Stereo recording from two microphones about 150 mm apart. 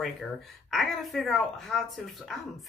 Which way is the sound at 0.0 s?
Centre (ahead or behind).